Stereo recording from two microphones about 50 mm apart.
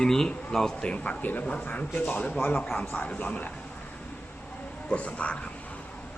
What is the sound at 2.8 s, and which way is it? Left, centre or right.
Speech, left.